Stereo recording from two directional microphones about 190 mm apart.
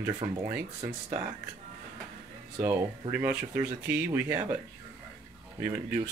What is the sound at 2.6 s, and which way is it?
Speech, 15° right (ahead or behind).